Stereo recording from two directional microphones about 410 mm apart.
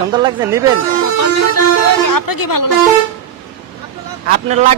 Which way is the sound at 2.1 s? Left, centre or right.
Left.